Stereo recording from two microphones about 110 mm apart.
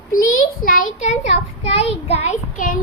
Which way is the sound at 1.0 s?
90° left.